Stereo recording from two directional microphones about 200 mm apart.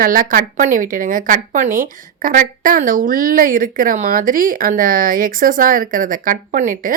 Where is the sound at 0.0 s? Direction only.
45° right (ahead or behind).